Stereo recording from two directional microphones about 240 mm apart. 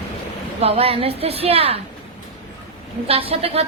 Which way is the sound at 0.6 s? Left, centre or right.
Right.